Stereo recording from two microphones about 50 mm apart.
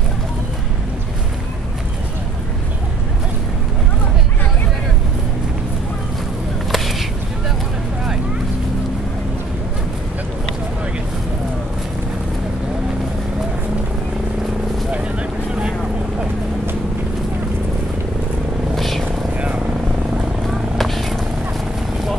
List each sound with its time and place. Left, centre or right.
6.7 s a sound: centre
14.9 s vehicle: right
18.8 s vehicle: centre
19.3 s vehicle: right
20.4 s vehicle: centre